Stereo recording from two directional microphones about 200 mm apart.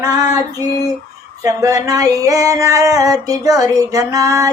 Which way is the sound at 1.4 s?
15° right (ahead or behind).